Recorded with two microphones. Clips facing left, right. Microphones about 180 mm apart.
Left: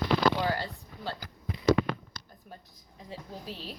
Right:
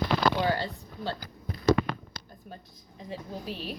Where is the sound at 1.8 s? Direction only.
40° right (ahead or behind).